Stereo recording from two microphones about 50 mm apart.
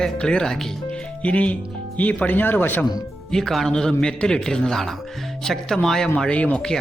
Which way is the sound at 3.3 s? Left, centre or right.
Centre.